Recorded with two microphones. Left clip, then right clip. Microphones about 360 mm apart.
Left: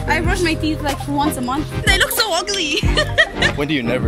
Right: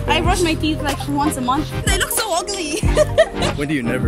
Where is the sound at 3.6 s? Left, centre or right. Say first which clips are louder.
Left 2 dB; centre.